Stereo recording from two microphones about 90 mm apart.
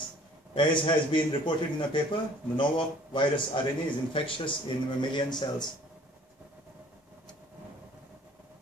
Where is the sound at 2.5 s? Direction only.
65° left (ahead or behind).